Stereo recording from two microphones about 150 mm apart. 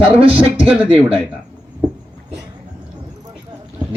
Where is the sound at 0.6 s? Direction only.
10° right (ahead or behind).